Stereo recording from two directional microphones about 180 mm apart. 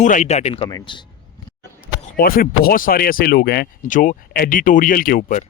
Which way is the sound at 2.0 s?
55° left (ahead or behind).